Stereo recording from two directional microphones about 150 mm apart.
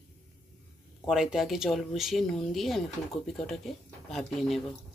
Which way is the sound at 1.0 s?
5° right (ahead or behind).